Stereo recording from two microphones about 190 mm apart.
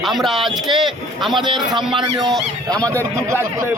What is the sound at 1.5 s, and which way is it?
Speech, 25° right (ahead or behind).